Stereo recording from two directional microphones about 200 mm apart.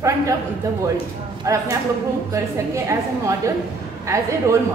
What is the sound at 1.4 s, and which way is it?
A woman's voice, 15° right (ahead or behind).